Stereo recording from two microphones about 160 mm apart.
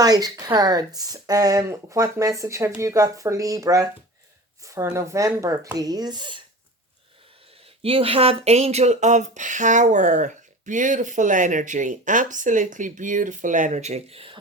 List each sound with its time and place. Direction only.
0.0 s speech: 25° right (ahead or behind)
7.8 s speech: 35° right (ahead or behind)